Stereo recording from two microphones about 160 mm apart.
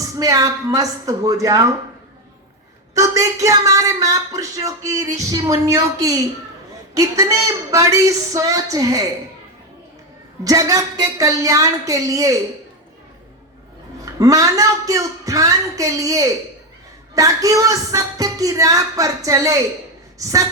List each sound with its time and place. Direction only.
0.2 s speech: 20° right (ahead or behind)
2.9 s speech: 20° right (ahead or behind)
10.4 s speech: 20° right (ahead or behind)
14.0 s speech: 20° right (ahead or behind)